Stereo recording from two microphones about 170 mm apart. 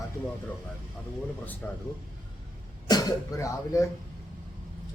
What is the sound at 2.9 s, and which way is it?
Speech, 20° left (ahead or behind).